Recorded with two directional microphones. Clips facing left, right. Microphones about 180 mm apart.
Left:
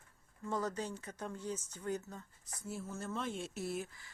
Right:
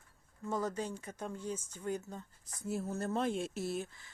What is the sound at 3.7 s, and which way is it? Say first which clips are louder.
Speech: right 2 dB; 25° right (ahead or behind).